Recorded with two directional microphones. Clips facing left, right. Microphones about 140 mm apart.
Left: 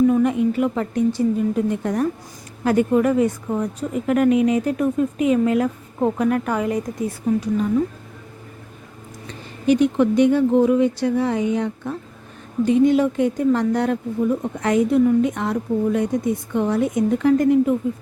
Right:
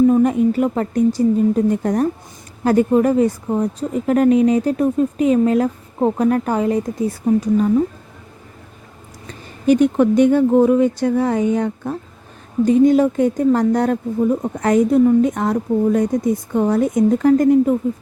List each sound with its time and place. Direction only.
0.1 s speech: 40° right (ahead or behind)
9.2 s speech: 45° right (ahead or behind)